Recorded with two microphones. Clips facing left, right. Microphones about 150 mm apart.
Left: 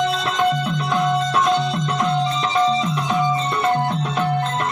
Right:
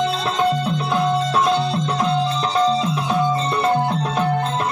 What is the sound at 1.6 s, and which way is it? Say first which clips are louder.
Music: right 1 dB; 30° right (ahead or behind).